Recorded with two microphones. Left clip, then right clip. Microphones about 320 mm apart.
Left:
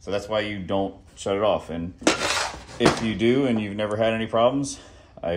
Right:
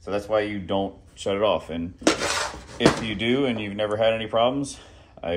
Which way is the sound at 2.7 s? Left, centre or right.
Left.